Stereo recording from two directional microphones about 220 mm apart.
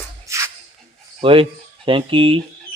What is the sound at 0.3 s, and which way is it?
Music, 15° right (ahead or behind).